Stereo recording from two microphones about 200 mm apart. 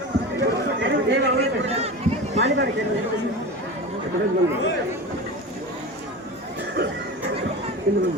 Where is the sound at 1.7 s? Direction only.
30° right (ahead or behind).